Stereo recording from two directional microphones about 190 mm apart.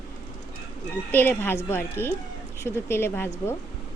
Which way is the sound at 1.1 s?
10° left (ahead or behind).